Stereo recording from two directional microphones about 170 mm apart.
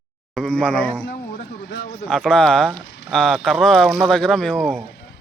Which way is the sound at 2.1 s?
5° left (ahead or behind).